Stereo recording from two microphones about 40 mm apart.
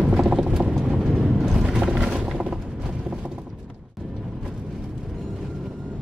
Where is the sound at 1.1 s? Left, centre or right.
Centre.